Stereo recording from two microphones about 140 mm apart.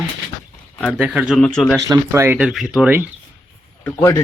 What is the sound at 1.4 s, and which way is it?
Speech, 5° left (ahead or behind).